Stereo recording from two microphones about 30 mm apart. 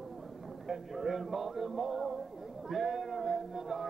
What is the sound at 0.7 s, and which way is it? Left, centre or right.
Music, centre.